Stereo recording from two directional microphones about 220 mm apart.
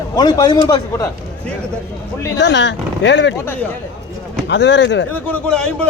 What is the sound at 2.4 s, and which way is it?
Speech, 50° left (ahead or behind).